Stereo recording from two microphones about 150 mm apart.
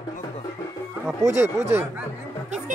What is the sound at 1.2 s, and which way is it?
Speech, 20° right (ahead or behind).